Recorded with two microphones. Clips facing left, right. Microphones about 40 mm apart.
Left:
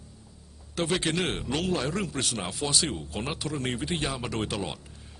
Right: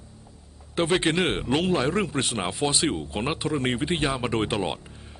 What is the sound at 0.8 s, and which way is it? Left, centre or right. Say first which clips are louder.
Speech: right 5 dB; right.